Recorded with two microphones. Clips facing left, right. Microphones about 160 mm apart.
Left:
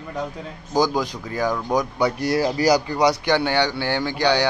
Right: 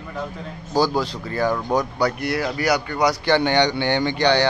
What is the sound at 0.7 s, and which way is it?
Speech, 15° left (ahead or behind).